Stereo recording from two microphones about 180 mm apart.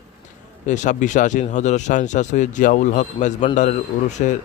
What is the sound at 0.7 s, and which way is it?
A man's voice, 45° left (ahead or behind).